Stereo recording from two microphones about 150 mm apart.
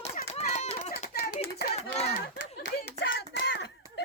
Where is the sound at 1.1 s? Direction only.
90° left.